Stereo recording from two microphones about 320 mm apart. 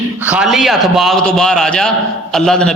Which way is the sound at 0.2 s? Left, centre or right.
Centre.